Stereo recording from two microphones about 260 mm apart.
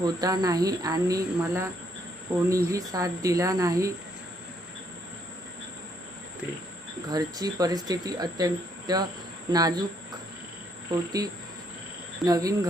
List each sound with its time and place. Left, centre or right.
0.0 s speech: centre
7.1 s speech: centre
10.9 s speech: centre